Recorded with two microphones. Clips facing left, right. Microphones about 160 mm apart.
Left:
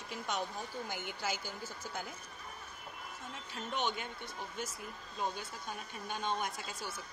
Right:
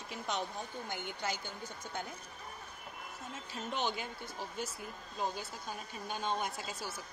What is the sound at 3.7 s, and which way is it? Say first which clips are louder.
Speech: even; 30° right (ahead or behind).